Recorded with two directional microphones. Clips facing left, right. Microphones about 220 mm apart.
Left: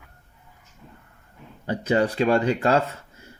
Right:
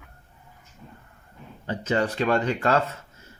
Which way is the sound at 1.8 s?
35° left (ahead or behind).